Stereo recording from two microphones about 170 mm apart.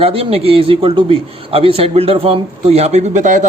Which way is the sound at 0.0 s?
35° right (ahead or behind).